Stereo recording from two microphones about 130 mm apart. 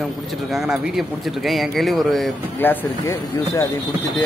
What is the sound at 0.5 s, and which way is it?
Speech, 5° right (ahead or behind).